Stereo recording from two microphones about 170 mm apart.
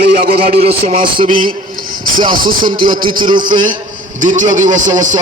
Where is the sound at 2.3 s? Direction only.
55° right (ahead or behind).